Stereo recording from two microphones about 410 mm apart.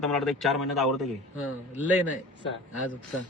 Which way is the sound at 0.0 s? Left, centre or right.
Centre.